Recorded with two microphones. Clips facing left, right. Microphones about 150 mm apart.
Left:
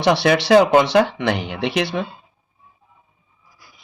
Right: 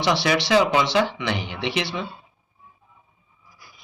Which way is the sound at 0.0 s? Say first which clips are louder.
Left 5 dB; 55° left (ahead or behind).